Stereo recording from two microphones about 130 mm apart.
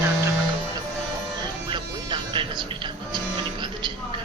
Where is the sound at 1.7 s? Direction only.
35° right (ahead or behind).